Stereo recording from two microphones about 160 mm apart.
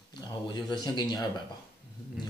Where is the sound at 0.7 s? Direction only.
30° left (ahead or behind).